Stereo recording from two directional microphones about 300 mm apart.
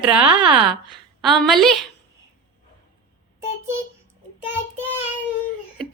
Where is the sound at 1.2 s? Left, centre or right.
Centre.